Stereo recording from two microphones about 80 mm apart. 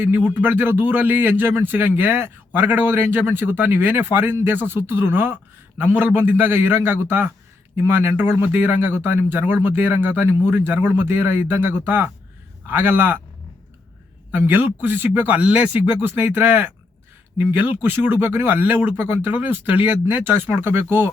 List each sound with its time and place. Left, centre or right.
0.0 s a man's voice: right
14.3 s a man's voice: right